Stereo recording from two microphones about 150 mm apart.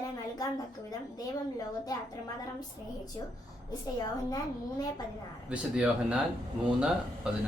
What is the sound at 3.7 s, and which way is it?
Speech, 25° left (ahead or behind).